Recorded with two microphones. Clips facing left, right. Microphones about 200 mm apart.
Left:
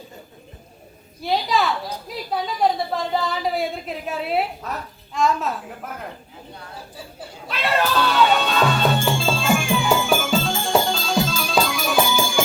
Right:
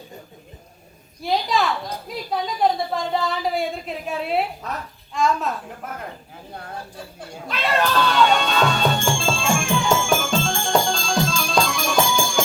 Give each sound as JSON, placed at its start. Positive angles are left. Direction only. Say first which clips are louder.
{"t": 1.2, "sound": "a woman's voice", "louder": "even", "side_deg": 0}
{"t": 6.9, "sound": "music", "louder": "right 1 dB", "side_deg": 5}